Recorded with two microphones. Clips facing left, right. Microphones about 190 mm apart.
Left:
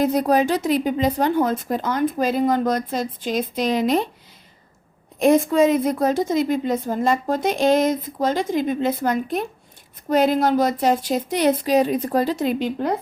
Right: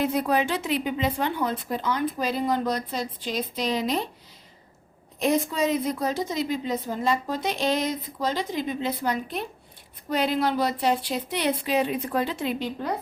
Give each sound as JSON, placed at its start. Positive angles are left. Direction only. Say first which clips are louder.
{"t": 0.0, "sound": "a woman's voice", "louder": "left 6 dB", "side_deg": 40}
{"t": 5.2, "sound": "a woman's voice", "louder": "left 8 dB", "side_deg": 50}